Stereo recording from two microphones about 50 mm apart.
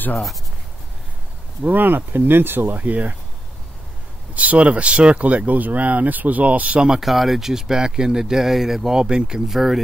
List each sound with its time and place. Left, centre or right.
1.6 s speech: right
4.4 s speech: right
7.0 s speech: centre
9.0 s speech: centre
9.5 s speech: centre